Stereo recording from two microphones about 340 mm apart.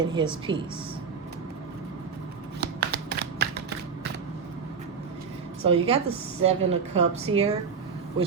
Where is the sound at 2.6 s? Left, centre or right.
Right.